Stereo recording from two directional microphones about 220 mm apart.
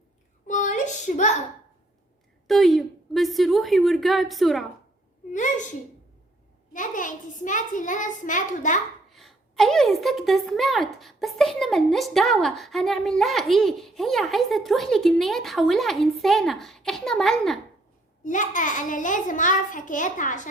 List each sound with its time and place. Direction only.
0.4 s a sound: 35° left (ahead or behind)
2.5 s speech: centre (ahead or behind)
5.3 s a child's voice: 35° left (ahead or behind)
6.7 s a child's voice: 35° left (ahead or behind)
9.0 s a sound: centre (ahead or behind)
10.0 s speech: centre (ahead or behind)
18.2 s a child's voice: 35° left (ahead or behind)